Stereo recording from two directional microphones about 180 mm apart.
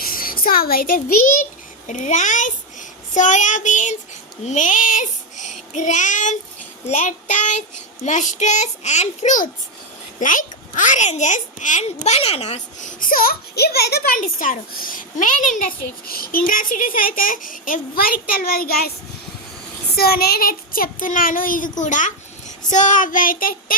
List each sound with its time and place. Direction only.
0.0 s a child's voice: 55° left (ahead or behind)
4.4 s child singing: 45° left (ahead or behind)
6.8 s a child's voice: 40° left (ahead or behind)
20.0 s a child's voice: 60° left (ahead or behind)